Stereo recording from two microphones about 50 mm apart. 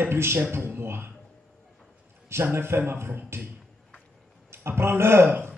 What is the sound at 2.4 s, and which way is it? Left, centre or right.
A man's voice, right.